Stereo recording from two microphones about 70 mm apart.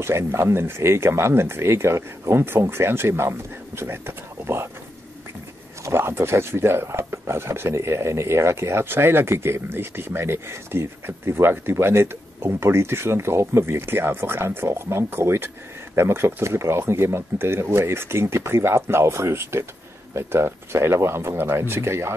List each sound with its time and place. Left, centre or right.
0.0 s speech: right
5.9 s speech: right